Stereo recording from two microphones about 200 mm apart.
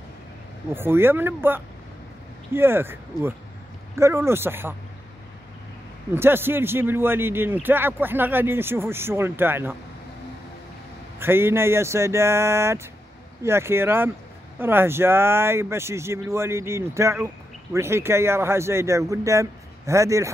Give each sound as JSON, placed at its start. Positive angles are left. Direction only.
{"t": 0.7, "sound": "speech", "side_deg": -10}
{"t": 6.1, "sound": "speech", "side_deg": -10}
{"t": 11.1, "sound": "speech", "side_deg": -10}